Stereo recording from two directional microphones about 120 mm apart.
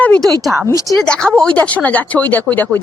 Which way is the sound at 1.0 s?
10° left (ahead or behind).